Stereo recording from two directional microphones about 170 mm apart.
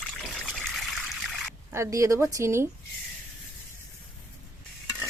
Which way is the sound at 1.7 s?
15° right (ahead or behind).